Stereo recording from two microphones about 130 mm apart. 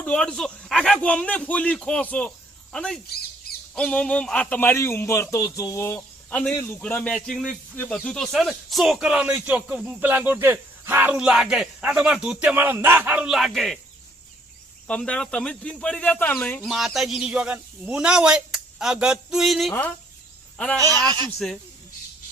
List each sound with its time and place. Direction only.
0.0 s a man's voice: 5° left (ahead or behind)
6.8 s speech: 10° left (ahead or behind)
14.8 s speech: 10° left (ahead or behind)
16.6 s a man's voice: centre (ahead or behind)
20.7 s speech: 25° right (ahead or behind)
21.3 s a man's voice: centre (ahead or behind)